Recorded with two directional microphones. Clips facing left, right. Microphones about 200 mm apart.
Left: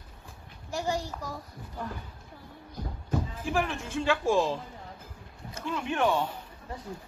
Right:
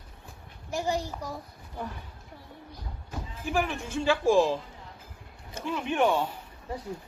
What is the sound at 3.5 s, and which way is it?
Speech, 5° right (ahead or behind).